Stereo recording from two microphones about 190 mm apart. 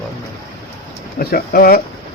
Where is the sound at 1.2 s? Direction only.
50° left (ahead or behind).